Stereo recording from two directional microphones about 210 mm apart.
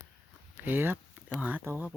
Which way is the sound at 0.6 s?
10° right (ahead or behind).